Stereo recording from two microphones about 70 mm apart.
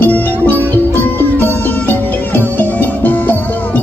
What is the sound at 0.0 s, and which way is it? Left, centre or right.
Music, left.